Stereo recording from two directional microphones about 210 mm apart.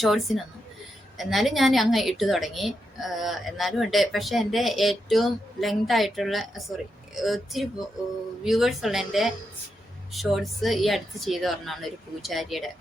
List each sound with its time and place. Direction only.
0.0 s a woman's voice: centre (ahead or behind)